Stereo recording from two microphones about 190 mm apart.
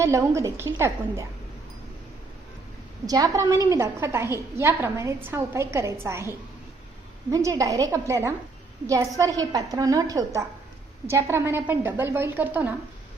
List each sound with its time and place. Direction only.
0.0 s a woman's voice: 15° right (ahead or behind)
3.1 s a woman's voice: 20° right (ahead or behind)